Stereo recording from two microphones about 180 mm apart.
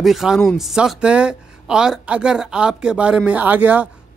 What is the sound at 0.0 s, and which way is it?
Speech, centre (ahead or behind).